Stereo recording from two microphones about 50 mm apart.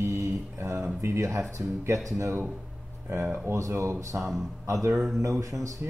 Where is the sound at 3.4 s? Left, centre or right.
Right.